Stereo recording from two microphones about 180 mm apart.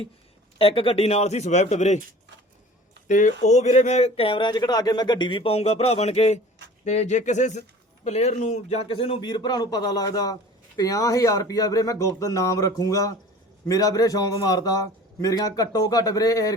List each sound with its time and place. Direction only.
0.6 s speech: 30° left (ahead or behind)
3.1 s a man's voice: 45° left (ahead or behind); by 16.6 s 20° left (ahead or behind)